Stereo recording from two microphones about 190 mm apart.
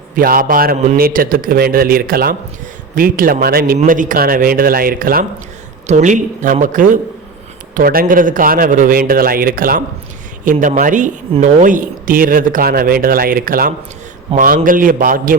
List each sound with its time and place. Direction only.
0.2 s speech: 50° right (ahead or behind)